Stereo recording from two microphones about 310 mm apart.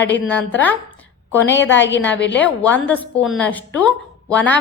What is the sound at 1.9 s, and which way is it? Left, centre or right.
A woman's voice, centre.